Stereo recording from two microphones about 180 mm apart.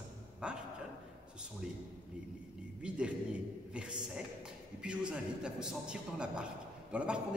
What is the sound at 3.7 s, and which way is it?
Speech, 5° right (ahead or behind).